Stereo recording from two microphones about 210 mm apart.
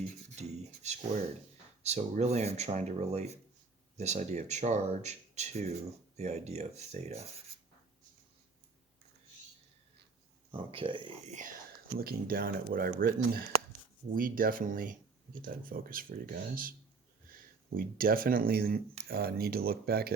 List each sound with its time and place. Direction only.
0.3 s speech: 35° right (ahead or behind)
10.5 s speech: 25° right (ahead or behind)
11.9 s speech: 45° right (ahead or behind)
17.3 s a sound: 45° right (ahead or behind)
17.7 s speech: 40° right (ahead or behind)